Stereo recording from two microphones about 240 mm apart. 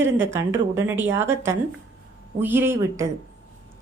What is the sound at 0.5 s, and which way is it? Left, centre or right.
Speech, centre.